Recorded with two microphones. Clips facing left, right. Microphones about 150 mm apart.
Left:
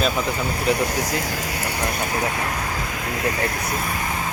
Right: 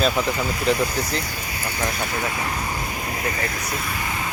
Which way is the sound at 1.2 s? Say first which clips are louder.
Left 4 dB; 90° left.